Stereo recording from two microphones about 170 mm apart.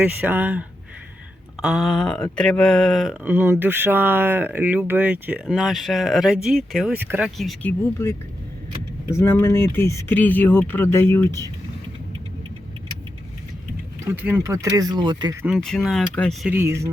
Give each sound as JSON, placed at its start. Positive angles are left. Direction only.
{"t": 0.0, "sound": "speech", "side_deg": -10}
{"t": 1.6, "sound": "speech", "side_deg": 0}
{"t": 3.2, "sound": "speech", "side_deg": -10}
{"t": 7.3, "sound": "speech", "side_deg": 0}
{"t": 7.7, "sound": "speech", "side_deg": 15}
{"t": 14.0, "sound": "speech", "side_deg": -10}
{"t": 15.5, "sound": "speech", "side_deg": 0}
{"t": 16.5, "sound": "speech", "side_deg": -15}